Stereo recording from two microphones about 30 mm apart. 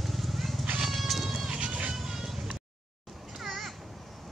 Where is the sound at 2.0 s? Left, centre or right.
Centre.